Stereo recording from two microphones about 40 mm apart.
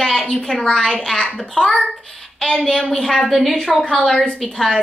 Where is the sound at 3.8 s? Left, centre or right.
Centre.